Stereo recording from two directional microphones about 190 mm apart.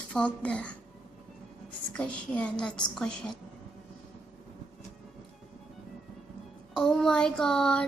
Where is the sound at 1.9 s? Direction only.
5° left (ahead or behind).